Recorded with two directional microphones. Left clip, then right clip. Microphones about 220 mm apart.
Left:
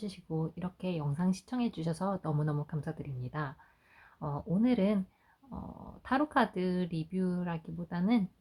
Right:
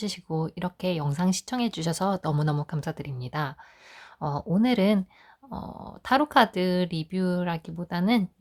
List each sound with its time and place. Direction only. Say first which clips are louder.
0.0 s speech: right 8 dB; 45° right (ahead or behind)